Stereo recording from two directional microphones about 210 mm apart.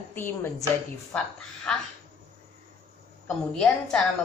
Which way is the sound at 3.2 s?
5° left (ahead or behind).